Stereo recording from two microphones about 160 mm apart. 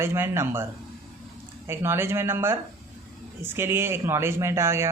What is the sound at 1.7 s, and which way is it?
Speech, 15° right (ahead or behind).